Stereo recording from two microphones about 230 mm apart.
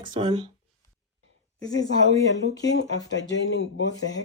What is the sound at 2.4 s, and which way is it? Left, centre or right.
Speech, left.